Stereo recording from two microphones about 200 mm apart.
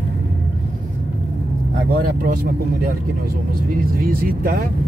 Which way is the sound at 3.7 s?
45° right (ahead or behind).